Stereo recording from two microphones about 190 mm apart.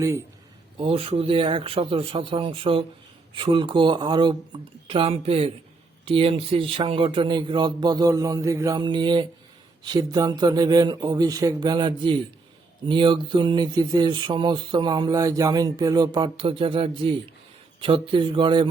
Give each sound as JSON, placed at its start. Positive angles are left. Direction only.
{"t": 0.0, "sound": "a man's voice", "side_deg": -15}
{"t": 0.8, "sound": "a man's voice", "side_deg": -30}